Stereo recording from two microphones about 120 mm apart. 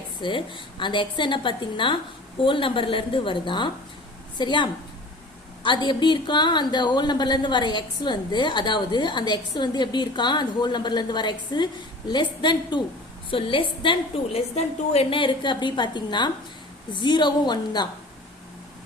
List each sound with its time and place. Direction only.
0.2 s a woman's voice: 45° left (ahead or behind)